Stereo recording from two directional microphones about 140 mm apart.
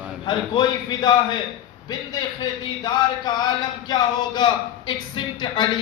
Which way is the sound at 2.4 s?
30° left (ahead or behind).